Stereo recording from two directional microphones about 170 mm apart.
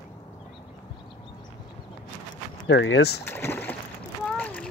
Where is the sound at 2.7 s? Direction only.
90° left.